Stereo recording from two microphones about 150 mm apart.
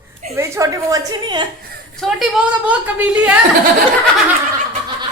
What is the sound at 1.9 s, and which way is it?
A woman's voice, centre (ahead or behind).